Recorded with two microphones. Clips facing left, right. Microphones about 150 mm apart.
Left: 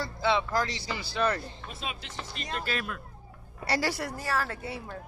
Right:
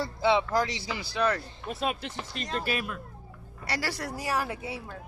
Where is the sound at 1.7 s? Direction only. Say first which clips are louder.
Right 11 dB; 55° right (ahead or behind).